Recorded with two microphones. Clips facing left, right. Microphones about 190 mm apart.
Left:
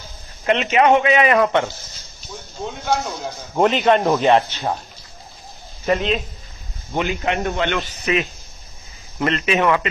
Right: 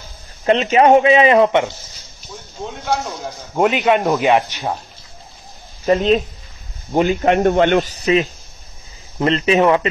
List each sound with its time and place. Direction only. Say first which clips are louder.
0.5 s a man's voice: right 4 dB; 35° right (ahead or behind); by 1.7 s 20° right (ahead or behind)
2.6 s a man's voice: even; centre (ahead or behind)
4.2 s speech: even; 15° right (ahead or behind)
5.9 s a man's voice: right 5 dB; 40° right (ahead or behind)